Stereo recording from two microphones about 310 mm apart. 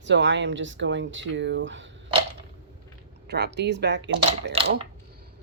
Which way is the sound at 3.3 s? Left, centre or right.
Right.